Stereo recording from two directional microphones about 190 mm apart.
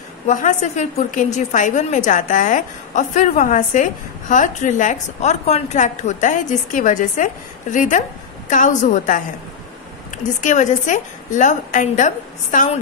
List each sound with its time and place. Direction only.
0.3 s a woman's voice: 40° left (ahead or behind)